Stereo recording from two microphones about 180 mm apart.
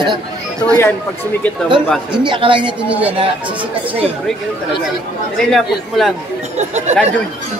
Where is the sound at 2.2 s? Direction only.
25° right (ahead or behind).